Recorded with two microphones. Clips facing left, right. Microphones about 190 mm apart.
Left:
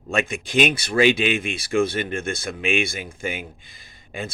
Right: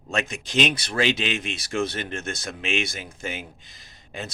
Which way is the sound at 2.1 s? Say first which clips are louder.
Left 5 dB; 55° left (ahead or behind).